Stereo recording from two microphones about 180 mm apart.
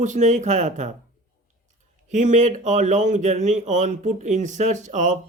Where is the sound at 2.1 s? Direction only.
45° right (ahead or behind).